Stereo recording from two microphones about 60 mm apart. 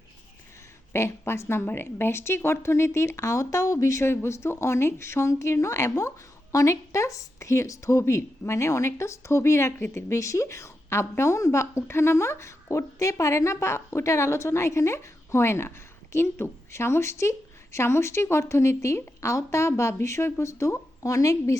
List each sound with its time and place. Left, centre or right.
0.9 s a woman's voice: left
10.1 s a woman's voice: left